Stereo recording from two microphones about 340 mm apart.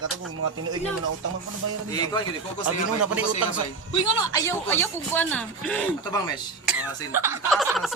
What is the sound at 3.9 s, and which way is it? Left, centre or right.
Speech, centre.